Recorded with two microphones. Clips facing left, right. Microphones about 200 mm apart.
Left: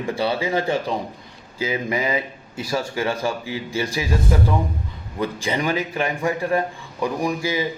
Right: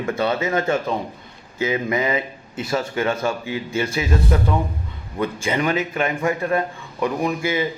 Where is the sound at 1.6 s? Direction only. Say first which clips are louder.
Right 2 dB; 30° left (ahead or behind).